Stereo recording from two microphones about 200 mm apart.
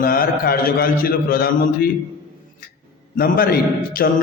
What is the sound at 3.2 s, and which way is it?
Speech, 50° left (ahead or behind).